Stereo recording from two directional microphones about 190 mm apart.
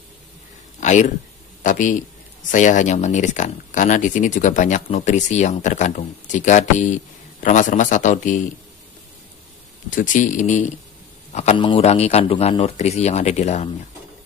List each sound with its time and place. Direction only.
0.7 s a sound: 40° left (ahead or behind)
1.6 s a man's voice: 40° left (ahead or behind)
9.8 s speech: 45° left (ahead or behind)